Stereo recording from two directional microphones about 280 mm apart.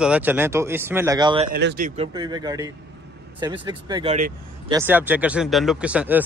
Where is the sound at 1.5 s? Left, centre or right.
Right.